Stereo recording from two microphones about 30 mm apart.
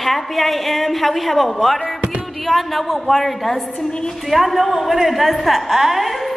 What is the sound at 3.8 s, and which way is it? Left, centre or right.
Speech, left.